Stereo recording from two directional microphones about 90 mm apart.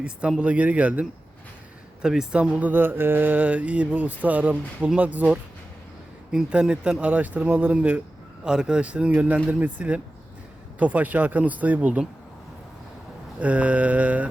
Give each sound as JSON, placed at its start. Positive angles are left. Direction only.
{"t": 0.0, "sound": "speech", "side_deg": -10}
{"t": 13.4, "sound": "speech", "side_deg": -15}